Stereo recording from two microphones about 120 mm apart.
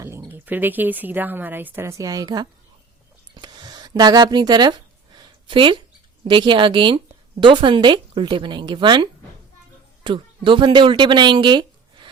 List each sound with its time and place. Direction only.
0.3 s speech: 15° right (ahead or behind); by 2.5 s 35° right (ahead or behind)
3.3 s a sound: 40° right (ahead or behind)
6.2 s a woman's voice: 40° right (ahead or behind)